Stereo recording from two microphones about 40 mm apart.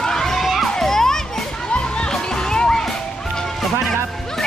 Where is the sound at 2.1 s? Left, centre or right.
Centre.